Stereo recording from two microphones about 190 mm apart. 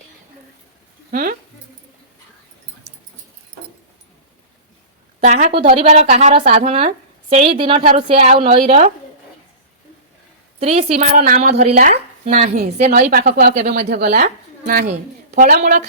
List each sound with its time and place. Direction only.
1.1 s a woman's voice: 45° right (ahead or behind)
5.2 s a woman's voice: 35° right (ahead or behind)
10.6 s a woman's voice: 35° right (ahead or behind)
11.6 s a woman's voice: 50° right (ahead or behind)
15.4 s a woman's voice: 40° right (ahead or behind)